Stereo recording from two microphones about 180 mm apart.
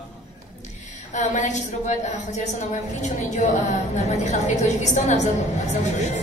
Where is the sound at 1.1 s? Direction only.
40° left (ahead or behind).